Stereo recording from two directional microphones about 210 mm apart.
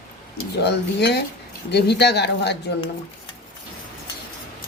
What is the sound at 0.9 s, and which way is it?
Speech, 55° left (ahead or behind).